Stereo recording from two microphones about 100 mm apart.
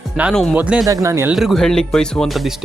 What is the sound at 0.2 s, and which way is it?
Speech, 15° right (ahead or behind).